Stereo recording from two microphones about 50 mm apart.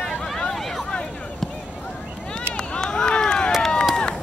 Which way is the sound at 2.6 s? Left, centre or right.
Centre.